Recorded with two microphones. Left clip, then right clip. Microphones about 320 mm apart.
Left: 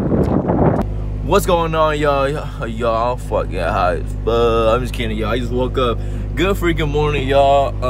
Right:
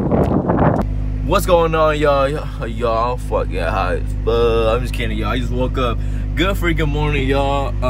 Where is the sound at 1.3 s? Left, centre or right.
Centre.